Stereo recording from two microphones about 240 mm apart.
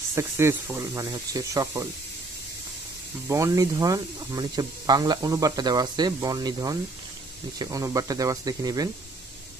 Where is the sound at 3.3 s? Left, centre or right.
Centre.